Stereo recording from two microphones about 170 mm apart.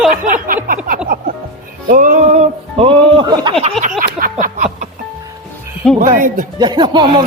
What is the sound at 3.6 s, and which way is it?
Speech, 35° right (ahead or behind).